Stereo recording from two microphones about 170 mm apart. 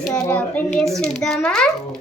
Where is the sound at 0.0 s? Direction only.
5° left (ahead or behind).